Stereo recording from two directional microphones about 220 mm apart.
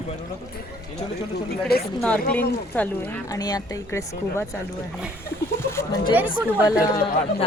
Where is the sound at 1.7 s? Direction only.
45° left (ahead or behind).